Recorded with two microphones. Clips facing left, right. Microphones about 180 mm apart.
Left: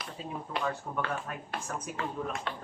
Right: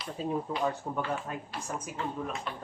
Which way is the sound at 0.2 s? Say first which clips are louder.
Right 9 dB; 45° right (ahead or behind).